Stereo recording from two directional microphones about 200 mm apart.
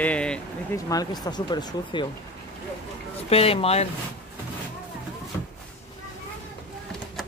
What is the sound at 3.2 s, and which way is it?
Speech, 30° left (ahead or behind).